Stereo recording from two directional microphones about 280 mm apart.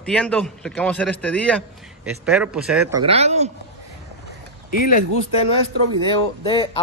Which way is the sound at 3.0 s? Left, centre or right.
Right.